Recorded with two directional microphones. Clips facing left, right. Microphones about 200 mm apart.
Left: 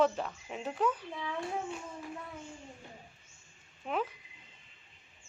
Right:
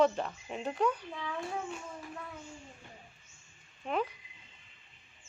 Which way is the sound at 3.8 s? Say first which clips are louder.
Right 1 dB; 5° left (ahead or behind).